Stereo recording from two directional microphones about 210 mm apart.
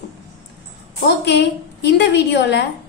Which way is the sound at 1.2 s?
55° left (ahead or behind).